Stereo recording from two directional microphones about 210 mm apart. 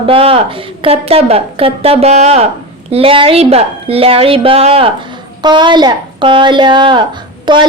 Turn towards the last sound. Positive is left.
turn(degrees=-20)  # may be behind; listen again after turning